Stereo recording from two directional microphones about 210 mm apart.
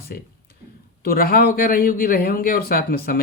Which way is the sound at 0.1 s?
50° left (ahead or behind).